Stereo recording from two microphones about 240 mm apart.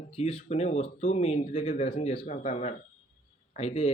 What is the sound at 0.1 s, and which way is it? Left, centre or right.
Speech, left.